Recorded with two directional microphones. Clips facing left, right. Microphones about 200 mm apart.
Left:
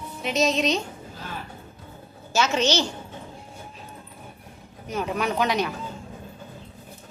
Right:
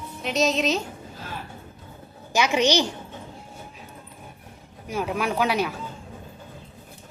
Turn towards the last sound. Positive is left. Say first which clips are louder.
# even
turn(degrees=-5)  # may be behind; listen again after turning